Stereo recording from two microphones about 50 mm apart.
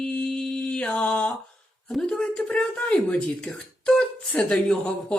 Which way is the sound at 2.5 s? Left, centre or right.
Left.